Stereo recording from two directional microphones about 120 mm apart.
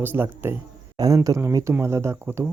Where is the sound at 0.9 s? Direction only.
30° right (ahead or behind).